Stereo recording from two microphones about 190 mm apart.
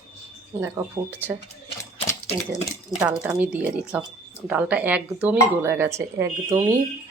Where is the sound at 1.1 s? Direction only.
10° right (ahead or behind).